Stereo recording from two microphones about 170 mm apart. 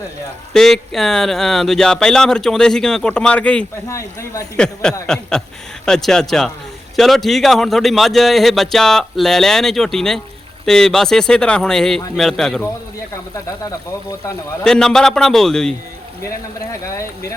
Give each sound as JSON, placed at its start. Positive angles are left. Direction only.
{"t": 0.5, "sound": "a man's voice", "side_deg": 0}
{"t": 3.8, "sound": "speech", "side_deg": 15}
{"t": 4.5, "sound": "a man's voice", "side_deg": 5}
{"t": 13.3, "sound": "speech", "side_deg": 20}
{"t": 14.6, "sound": "a man's voice", "side_deg": 5}